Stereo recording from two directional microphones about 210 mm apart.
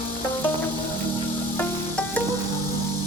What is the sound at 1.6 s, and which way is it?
Music, 5° left (ahead or behind).